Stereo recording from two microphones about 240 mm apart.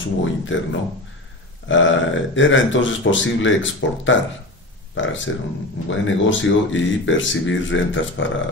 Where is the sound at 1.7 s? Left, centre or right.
Left.